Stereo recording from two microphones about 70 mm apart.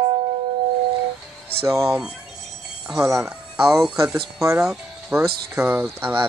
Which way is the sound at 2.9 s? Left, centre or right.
Right.